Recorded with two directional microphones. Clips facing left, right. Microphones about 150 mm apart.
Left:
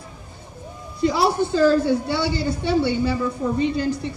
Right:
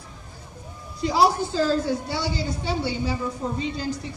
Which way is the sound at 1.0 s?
60° left (ahead or behind).